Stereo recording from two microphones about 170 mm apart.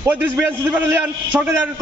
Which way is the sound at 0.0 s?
10° right (ahead or behind).